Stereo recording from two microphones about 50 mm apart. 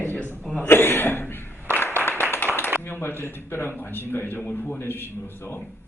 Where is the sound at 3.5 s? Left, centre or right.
Left.